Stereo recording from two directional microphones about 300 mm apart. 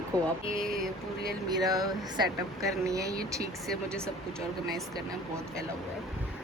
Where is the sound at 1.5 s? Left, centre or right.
Centre.